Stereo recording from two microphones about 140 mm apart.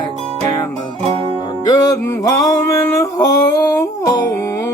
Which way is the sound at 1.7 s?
25° left (ahead or behind).